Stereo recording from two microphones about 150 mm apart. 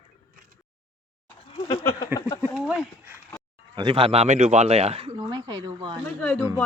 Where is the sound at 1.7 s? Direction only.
25° left (ahead or behind).